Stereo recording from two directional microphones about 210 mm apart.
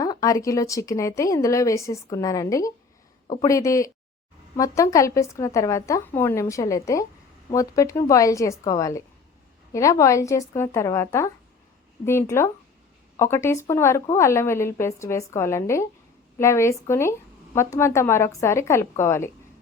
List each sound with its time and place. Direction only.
0.0 s a woman's voice: 15° left (ahead or behind)